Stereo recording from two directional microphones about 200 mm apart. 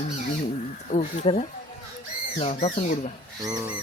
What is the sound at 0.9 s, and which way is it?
Speech, 35° left (ahead or behind).